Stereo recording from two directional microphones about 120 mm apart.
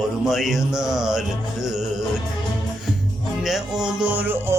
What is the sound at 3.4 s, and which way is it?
Music, 5° right (ahead or behind).